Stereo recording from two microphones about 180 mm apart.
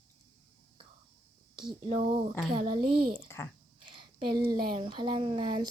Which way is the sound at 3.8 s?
25° right (ahead or behind).